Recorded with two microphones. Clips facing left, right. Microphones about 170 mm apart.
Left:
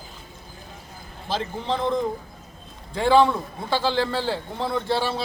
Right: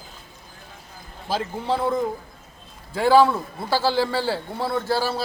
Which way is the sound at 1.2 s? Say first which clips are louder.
Right 2 dB; 10° right (ahead or behind).